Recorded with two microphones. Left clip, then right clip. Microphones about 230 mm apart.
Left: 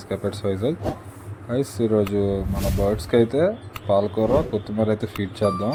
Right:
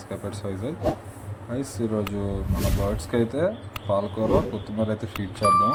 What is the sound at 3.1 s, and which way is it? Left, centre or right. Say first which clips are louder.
Speech: left 5 dB; centre.